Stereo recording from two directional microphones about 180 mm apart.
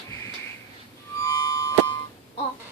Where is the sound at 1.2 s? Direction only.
25° left (ahead or behind).